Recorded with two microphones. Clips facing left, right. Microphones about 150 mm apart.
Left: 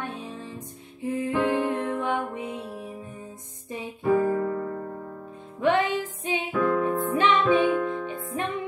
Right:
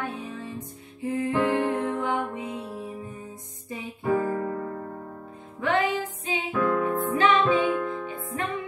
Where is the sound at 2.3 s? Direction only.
20° left (ahead or behind).